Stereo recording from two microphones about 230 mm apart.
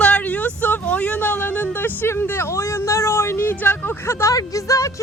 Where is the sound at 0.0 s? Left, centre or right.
Centre.